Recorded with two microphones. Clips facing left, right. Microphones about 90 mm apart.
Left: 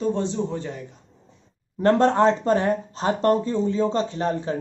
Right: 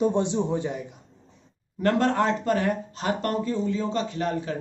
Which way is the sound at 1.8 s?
30° left (ahead or behind).